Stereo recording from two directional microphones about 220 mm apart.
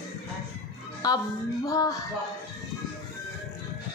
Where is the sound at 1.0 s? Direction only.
20° left (ahead or behind).